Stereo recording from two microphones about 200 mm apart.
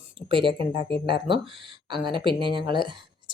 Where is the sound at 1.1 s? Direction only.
25° right (ahead or behind).